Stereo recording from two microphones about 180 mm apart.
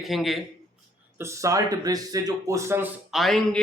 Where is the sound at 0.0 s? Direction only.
Centre (ahead or behind).